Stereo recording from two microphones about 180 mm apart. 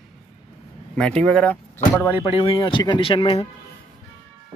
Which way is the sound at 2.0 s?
25° left (ahead or behind).